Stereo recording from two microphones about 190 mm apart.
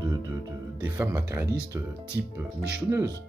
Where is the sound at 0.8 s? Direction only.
10° right (ahead or behind).